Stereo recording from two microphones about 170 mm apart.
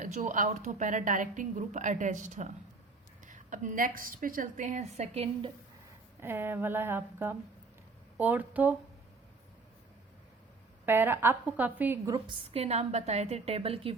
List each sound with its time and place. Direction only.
0.0 s a woman's voice: 50° right (ahead or behind)
6.1 s a woman's voice: 15° right (ahead or behind)
10.8 s a woman's voice: 10° right (ahead or behind)
12.1 s a woman's voice: 30° right (ahead or behind)